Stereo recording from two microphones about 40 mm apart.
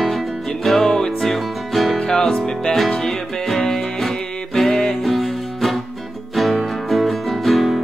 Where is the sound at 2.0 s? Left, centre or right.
Centre.